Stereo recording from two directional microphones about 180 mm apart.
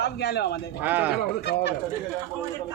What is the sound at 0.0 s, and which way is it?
Speech, 65° left (ahead or behind).